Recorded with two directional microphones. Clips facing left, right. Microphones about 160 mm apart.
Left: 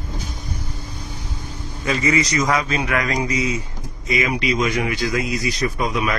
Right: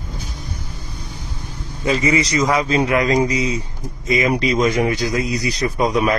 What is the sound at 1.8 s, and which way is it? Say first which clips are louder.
A man's voice: right 2 dB; 25° right (ahead or behind).